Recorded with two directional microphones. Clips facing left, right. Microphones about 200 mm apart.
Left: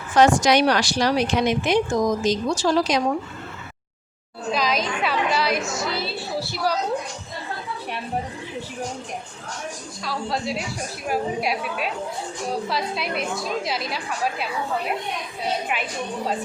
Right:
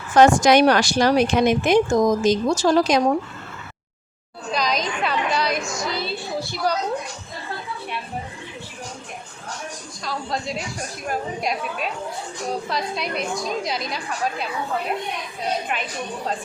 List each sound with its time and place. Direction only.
0.2 s speech: 50° right (ahead or behind)
4.5 s a woman's voice: 5° left (ahead or behind)
10.0 s a woman's voice: 5° left (ahead or behind)
15.7 s a woman's voice: 5° left (ahead or behind)